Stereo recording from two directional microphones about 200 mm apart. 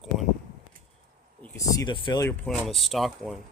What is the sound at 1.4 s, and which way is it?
Speech, 15° left (ahead or behind).